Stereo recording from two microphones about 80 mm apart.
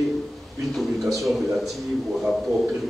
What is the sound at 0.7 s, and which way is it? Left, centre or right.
Speech, centre.